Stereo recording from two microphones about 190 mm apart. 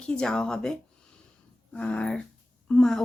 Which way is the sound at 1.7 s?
5° left (ahead or behind).